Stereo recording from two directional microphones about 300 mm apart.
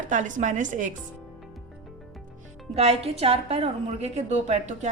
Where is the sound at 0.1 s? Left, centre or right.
Right.